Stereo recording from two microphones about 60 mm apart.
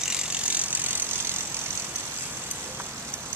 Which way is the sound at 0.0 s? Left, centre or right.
Centre.